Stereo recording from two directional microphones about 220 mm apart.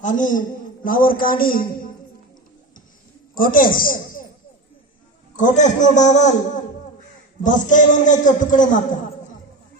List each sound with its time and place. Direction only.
0.0 s a man's voice: 35° left (ahead or behind)
3.3 s a man's voice: 40° left (ahead or behind)
5.4 s a man's voice: 35° left (ahead or behind)
7.4 s a man's voice: 35° left (ahead or behind)